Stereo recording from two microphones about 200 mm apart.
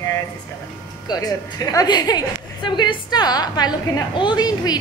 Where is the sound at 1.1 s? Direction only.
20° left (ahead or behind).